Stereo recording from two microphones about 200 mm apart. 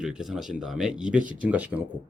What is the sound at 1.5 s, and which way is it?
Speech, 10° right (ahead or behind).